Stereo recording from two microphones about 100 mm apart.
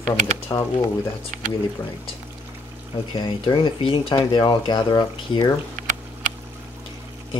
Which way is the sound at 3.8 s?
65° left (ahead or behind).